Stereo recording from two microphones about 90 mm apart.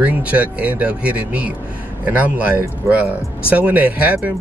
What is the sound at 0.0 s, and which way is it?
Speech, 15° right (ahead or behind).